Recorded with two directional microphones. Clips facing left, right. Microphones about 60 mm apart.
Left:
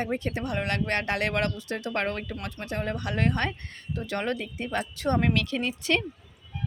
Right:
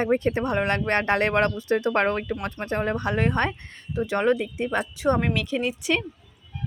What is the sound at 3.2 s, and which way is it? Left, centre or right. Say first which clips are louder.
Speech: right 3 dB; centre.